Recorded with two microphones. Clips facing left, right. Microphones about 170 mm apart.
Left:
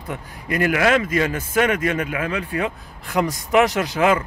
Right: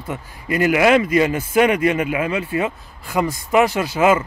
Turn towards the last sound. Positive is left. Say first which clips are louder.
# right 2 dB
turn(degrees=-5)  # may be behind; listen again after turning